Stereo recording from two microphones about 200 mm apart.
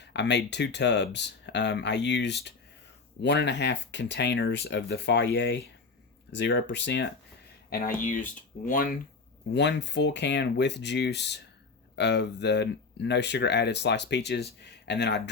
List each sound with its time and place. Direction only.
0.0 s speech: 60° left (ahead or behind)
7.7 s speech: 45° left (ahead or behind)
9.6 s speech: 60° left (ahead or behind)